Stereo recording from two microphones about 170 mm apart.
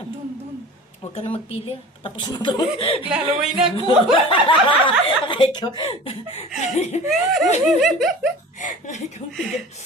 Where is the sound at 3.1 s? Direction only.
5° right (ahead or behind).